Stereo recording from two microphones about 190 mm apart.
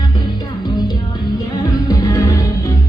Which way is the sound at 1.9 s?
20° left (ahead or behind).